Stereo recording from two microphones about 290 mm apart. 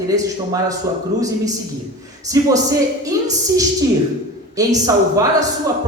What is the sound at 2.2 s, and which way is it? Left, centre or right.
A man's voice, centre.